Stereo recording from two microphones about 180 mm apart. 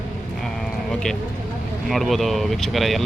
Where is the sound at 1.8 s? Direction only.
Centre (ahead or behind).